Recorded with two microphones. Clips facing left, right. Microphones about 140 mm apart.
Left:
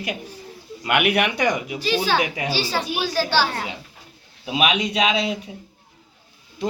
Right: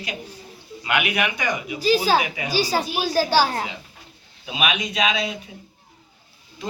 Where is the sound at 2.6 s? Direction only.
40° right (ahead or behind).